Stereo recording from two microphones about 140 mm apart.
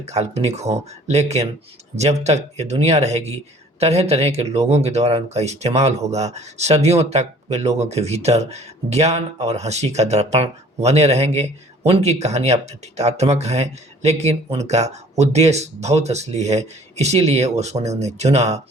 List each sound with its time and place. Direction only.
0.0 s speech: 50° right (ahead or behind)